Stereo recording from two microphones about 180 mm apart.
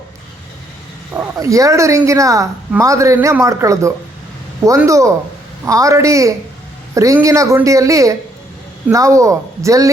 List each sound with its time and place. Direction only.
1.1 s speech: 15° right (ahead or behind)